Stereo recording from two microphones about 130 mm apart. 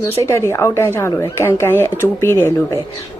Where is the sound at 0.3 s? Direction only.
20° left (ahead or behind).